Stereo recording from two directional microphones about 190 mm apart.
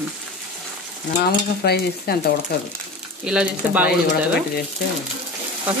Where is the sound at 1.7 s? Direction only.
55° left (ahead or behind).